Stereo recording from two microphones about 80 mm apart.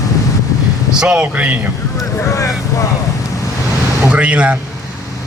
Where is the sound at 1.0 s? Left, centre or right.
Centre.